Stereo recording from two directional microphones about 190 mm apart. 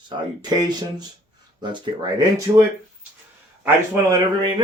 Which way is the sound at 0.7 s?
20° right (ahead or behind).